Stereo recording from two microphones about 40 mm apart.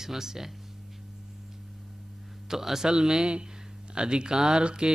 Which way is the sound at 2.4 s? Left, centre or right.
Centre.